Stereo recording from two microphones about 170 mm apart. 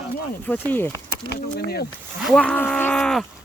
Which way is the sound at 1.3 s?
70° left (ahead or behind).